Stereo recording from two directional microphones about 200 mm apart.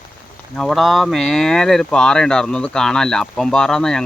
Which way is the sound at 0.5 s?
Centre (ahead or behind).